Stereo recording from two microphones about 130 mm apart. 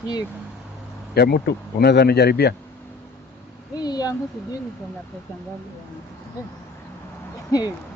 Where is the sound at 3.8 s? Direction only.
30° left (ahead or behind).